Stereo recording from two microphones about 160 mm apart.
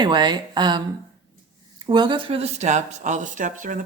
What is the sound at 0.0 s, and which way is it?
Speech, 30° right (ahead or behind).